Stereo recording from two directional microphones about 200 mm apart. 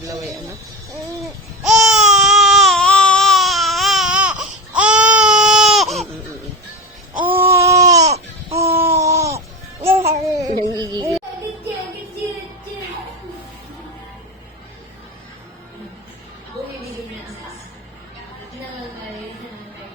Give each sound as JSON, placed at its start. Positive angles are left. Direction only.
{"t": 1.6, "sound": "baby cry", "side_deg": 0}
{"t": 7.2, "sound": "baby cry", "side_deg": -10}
{"t": 8.7, "sound": "a sound", "side_deg": -10}
{"t": 9.8, "sound": "babbling", "side_deg": -10}
{"t": 10.4, "sound": "carnatic music", "side_deg": -20}